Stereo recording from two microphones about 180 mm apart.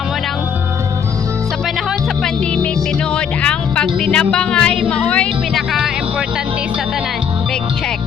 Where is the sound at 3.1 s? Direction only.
5° left (ahead or behind).